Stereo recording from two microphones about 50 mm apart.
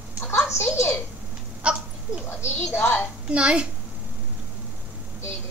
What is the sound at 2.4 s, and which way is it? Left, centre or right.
Speech, left.